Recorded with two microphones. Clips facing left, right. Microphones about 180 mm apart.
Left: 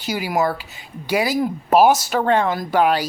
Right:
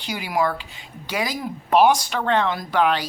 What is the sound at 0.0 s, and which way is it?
Speech, 5° left (ahead or behind).